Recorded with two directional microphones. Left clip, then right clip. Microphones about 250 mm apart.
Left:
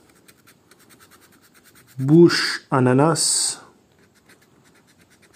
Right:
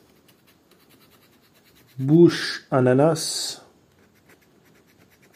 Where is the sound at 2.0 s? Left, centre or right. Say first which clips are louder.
Left 2 dB; centre.